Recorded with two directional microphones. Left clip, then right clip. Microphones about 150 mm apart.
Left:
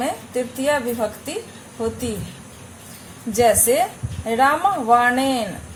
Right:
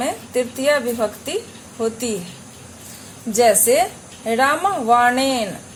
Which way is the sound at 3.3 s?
20° right (ahead or behind).